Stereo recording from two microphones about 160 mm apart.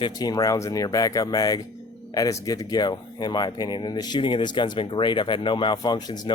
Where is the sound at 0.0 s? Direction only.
25° left (ahead or behind).